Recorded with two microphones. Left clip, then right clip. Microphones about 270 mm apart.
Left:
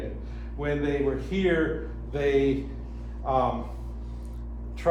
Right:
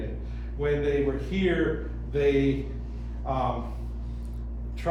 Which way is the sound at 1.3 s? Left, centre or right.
Centre.